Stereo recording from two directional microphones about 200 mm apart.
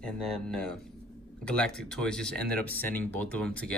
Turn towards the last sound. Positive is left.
turn(degrees=5)  # may be behind; listen again after turning